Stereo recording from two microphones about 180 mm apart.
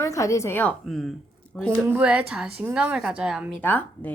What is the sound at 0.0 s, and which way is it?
Speech, 15° left (ahead or behind).